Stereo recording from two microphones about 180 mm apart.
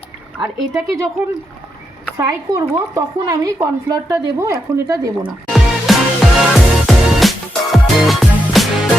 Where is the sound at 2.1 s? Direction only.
20° right (ahead or behind).